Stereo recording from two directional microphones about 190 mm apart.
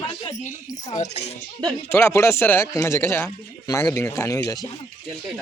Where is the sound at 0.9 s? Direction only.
35° left (ahead or behind).